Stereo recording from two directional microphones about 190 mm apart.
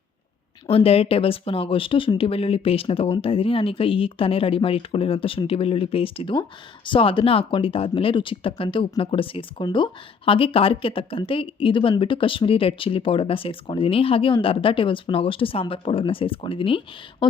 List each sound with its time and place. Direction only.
0.7 s speech: 30° left (ahead or behind)